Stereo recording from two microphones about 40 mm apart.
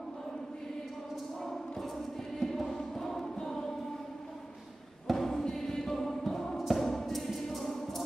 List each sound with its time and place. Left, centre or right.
2.3 s music: centre
5.0 s a sound: centre
6.7 s thump: centre